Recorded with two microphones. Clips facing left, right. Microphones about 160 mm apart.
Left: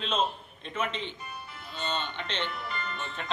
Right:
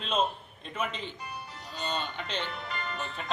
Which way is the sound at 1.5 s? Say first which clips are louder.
Even; 35° right (ahead or behind).